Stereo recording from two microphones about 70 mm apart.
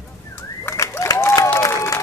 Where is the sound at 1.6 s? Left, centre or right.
Left.